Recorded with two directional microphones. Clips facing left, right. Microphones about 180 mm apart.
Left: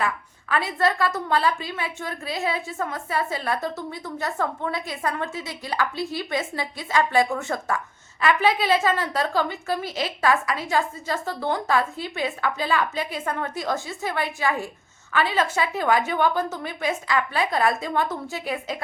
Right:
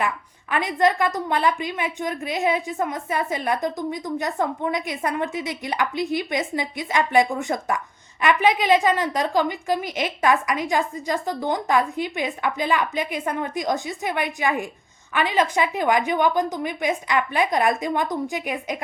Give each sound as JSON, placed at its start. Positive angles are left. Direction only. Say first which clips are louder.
{"t": 0.0, "sound": "a woman's voice", "louder": "right 1 dB", "side_deg": -20}